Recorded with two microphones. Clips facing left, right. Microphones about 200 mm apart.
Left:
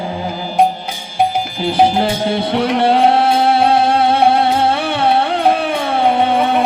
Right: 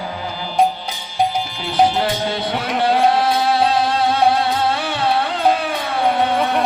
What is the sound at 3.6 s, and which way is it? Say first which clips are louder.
Music: left 4 dB; 60° left (ahead or behind).